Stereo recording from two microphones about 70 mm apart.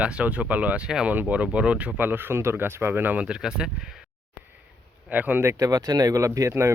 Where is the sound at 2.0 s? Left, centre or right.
Right.